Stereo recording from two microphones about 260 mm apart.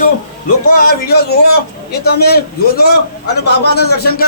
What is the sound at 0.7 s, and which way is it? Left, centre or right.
A man's voice, left.